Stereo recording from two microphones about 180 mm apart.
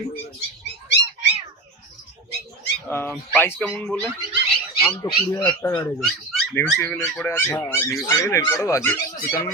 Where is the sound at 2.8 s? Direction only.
10° left (ahead or behind).